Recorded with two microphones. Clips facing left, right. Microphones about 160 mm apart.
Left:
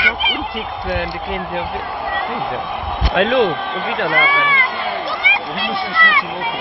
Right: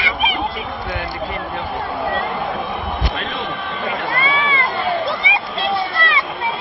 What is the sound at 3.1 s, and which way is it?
Speech, 90° left.